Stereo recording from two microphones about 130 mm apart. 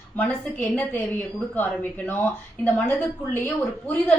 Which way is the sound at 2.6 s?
15° left (ahead or behind).